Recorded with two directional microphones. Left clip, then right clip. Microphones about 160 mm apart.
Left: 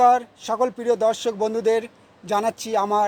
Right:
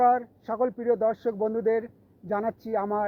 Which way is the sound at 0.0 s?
30° left (ahead or behind).